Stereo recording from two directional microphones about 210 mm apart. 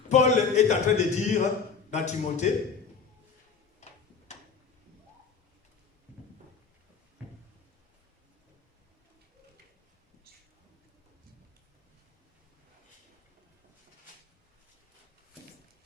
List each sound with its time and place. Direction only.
0.1 s a man's voice: 35° left (ahead or behind)
3.8 s tick-tock: 35° left (ahead or behind)